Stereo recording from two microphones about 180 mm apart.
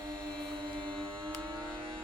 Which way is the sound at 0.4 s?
25° right (ahead or behind).